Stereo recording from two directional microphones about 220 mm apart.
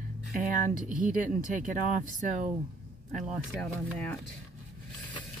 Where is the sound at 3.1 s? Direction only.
Centre (ahead or behind).